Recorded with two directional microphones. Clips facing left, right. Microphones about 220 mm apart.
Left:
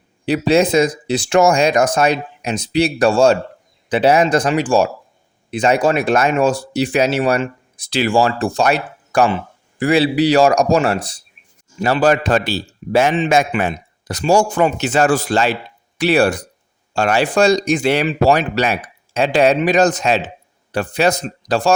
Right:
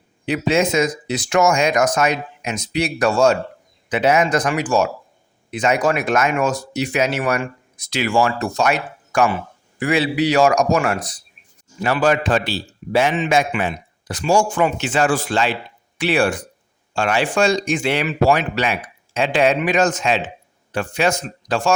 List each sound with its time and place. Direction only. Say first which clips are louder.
0.3 s speech: left 4 dB; 35° left (ahead or behind)